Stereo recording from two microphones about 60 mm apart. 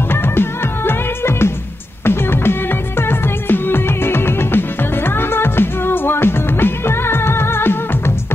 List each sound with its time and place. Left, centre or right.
0.1 s music: left